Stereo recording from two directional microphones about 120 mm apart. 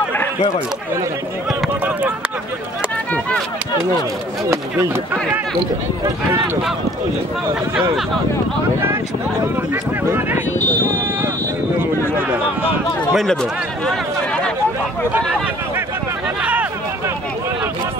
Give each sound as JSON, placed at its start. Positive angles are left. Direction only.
{"t": 1.9, "sound": "speech", "side_deg": -15}
{"t": 3.1, "sound": "speech", "side_deg": 10}
{"t": 4.5, "sound": "speech", "side_deg": -20}
{"t": 10.0, "sound": "speech", "side_deg": -20}
{"t": 11.8, "sound": "speech", "side_deg": -15}
{"t": 13.1, "sound": "speech", "side_deg": 5}
{"t": 16.3, "sound": "a sound", "side_deg": -10}